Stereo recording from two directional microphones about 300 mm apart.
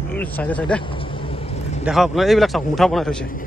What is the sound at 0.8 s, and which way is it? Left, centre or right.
Vehicle, centre.